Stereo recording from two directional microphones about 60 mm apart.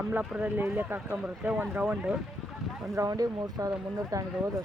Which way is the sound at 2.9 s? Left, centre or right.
Right.